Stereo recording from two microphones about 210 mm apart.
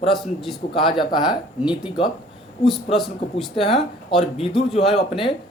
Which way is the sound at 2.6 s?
Centre (ahead or behind).